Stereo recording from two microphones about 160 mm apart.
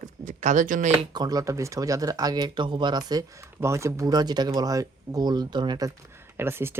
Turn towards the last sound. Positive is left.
turn(degrees=-15)  # may be behind; listen again after turning